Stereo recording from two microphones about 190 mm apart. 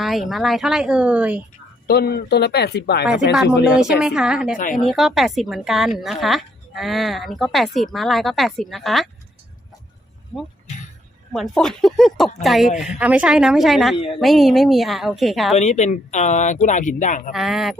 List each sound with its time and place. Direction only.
0.0 s speech: centre (ahead or behind)
1.9 s speech: 55° left (ahead or behind)
3.3 s speech: 5° right (ahead or behind)
4.5 s a woman's voice: 45° left (ahead or behind)
4.9 s speech: centre (ahead or behind)
11.3 s speech: 5° left (ahead or behind)
13.9 s a woman's voice: 30° left (ahead or behind)
14.2 s speech: centre (ahead or behind)
15.5 s speech: 35° left (ahead or behind)
17.3 s speech: centre (ahead or behind)